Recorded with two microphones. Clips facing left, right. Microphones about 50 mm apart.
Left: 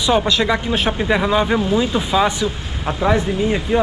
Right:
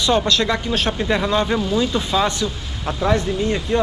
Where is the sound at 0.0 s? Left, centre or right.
Centre.